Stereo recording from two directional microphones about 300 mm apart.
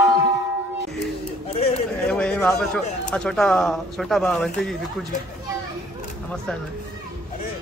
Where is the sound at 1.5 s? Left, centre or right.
Left.